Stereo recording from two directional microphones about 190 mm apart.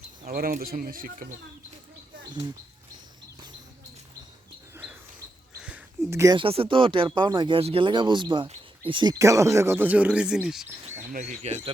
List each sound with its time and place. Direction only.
0.3 s speech: 50° right (ahead or behind)
4.7 s a sound: 10° right (ahead or behind)
6.3 s speech: 30° right (ahead or behind); by 11.0 s centre (ahead or behind)
11.1 s speech: 35° right (ahead or behind)